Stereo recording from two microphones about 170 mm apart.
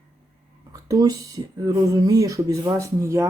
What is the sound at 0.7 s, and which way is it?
Speech, 20° right (ahead or behind).